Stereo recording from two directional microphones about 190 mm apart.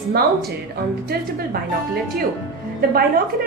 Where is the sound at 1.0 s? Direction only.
55° right (ahead or behind).